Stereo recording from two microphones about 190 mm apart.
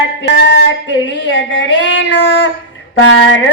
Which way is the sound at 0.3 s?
65° left (ahead or behind).